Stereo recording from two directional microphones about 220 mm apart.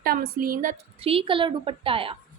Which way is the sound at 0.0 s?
40° right (ahead or behind).